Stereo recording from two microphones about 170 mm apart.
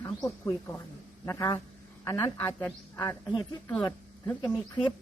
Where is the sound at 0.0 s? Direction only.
15° left (ahead or behind).